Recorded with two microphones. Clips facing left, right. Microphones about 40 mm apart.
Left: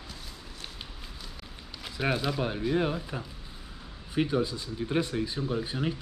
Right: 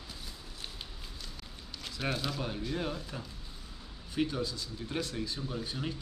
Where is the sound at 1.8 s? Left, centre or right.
Centre.